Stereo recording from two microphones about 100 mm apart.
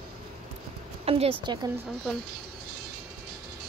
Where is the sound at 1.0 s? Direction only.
90° right.